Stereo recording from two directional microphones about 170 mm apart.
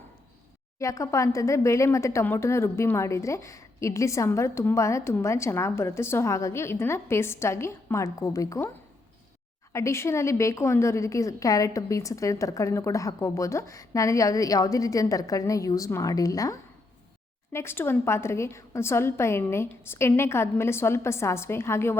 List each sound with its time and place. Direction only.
0.8 s speech: 20° left (ahead or behind)
9.7 s a woman's voice: 15° left (ahead or behind)